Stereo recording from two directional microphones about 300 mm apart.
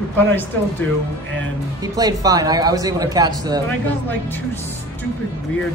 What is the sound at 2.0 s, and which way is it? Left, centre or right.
Speech, centre.